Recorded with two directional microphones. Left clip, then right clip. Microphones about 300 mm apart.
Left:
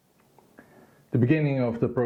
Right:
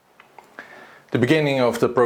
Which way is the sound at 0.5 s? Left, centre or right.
Centre.